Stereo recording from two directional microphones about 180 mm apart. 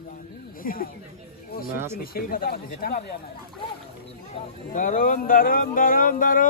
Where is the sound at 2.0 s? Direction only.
55° left (ahead or behind).